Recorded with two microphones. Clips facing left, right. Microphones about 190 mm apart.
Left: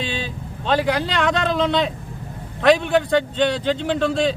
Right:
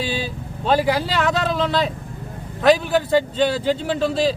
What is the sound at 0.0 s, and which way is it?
A man's voice, 5° right (ahead or behind).